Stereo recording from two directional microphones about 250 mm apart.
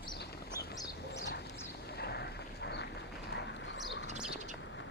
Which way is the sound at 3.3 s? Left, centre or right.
Left.